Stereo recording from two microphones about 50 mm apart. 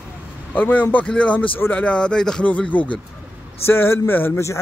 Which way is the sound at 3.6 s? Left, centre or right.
Left.